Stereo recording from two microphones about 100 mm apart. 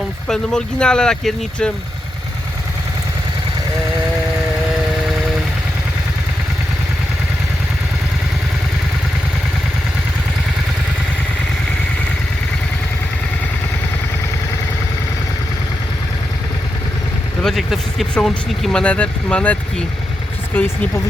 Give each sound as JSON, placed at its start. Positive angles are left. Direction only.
{"t": 0.3, "sound": "speech", "side_deg": 10}
{"t": 17.4, "sound": "speech", "side_deg": 0}
{"t": 20.5, "sound": "speech", "side_deg": 20}